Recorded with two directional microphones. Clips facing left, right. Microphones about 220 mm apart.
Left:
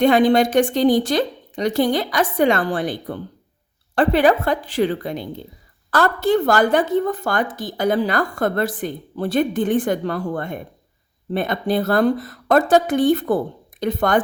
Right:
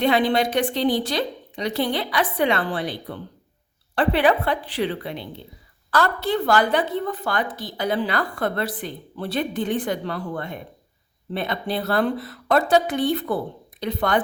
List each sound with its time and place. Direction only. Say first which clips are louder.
0.0 s a woman's voice: left 5 dB; 45° left (ahead or behind)